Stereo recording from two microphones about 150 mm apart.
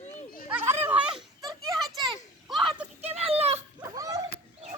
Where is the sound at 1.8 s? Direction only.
Centre (ahead or behind).